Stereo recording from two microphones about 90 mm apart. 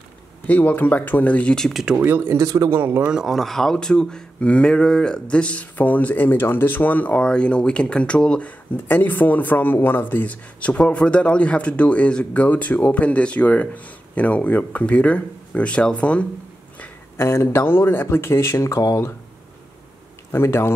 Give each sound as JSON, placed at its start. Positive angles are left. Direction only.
{"t": 0.5, "sound": "speech", "side_deg": 15}
{"t": 2.0, "sound": "speech", "side_deg": -20}
{"t": 2.7, "sound": "speech", "side_deg": -25}
{"t": 3.1, "sound": "speech", "side_deg": -5}
{"t": 17.2, "sound": "speech", "side_deg": 30}
{"t": 20.2, "sound": "speech", "side_deg": 25}